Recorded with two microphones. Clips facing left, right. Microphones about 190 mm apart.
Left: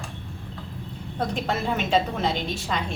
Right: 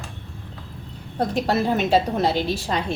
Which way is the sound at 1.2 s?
35° right (ahead or behind).